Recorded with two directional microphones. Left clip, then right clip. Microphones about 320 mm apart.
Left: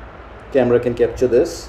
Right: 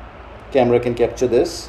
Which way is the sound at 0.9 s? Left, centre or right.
Right.